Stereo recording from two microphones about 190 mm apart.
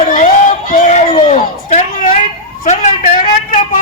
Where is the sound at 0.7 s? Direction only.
40° left (ahead or behind).